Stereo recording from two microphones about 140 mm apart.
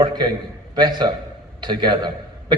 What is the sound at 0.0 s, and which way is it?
A man's voice, 30° right (ahead or behind).